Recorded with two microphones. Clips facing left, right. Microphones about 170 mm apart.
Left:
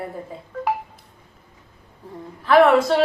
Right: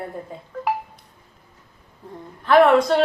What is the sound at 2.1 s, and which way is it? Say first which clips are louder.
Speech: even; centre (ahead or behind).